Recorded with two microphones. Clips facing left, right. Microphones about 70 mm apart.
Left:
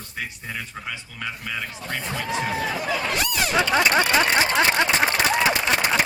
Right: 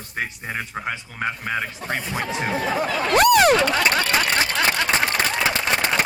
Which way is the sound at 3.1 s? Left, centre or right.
Right.